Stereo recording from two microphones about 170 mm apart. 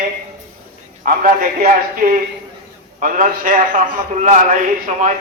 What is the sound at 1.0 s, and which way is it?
A man's voice, 55° right (ahead or behind).